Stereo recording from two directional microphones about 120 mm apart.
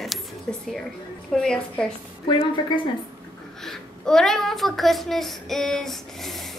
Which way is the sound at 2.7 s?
40° left (ahead or behind).